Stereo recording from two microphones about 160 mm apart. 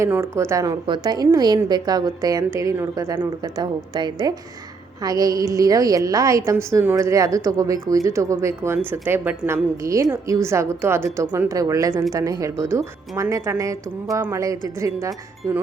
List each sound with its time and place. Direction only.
0.0 s a woman's voice: 15° right (ahead or behind)